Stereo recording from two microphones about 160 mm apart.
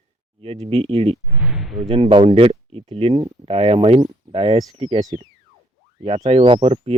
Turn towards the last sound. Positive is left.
turn(degrees=-35)  # may be behind; listen again after turning